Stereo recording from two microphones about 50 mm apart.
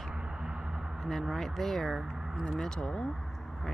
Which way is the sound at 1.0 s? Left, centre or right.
Centre.